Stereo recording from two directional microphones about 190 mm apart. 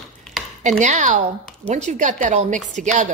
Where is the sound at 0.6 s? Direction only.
40° right (ahead or behind).